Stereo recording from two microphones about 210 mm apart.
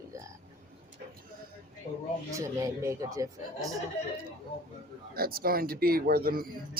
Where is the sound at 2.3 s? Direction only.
15° right (ahead or behind).